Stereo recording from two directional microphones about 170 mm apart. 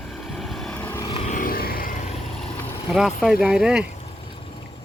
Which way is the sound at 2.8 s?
5° right (ahead or behind).